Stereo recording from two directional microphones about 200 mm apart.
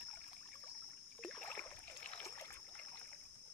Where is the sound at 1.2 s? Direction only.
5° left (ahead or behind).